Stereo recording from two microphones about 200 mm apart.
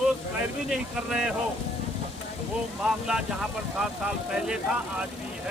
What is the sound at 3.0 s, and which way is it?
Speech, 5° right (ahead or behind).